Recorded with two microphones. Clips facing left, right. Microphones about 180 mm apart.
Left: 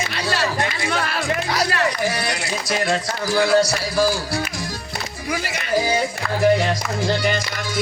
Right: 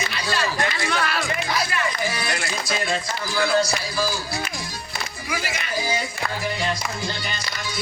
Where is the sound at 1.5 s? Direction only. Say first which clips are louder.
Left 4 dB; 75° left (ahead or behind).